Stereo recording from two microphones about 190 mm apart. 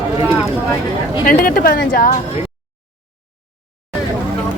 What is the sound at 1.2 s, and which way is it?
Speech, 45° left (ahead or behind).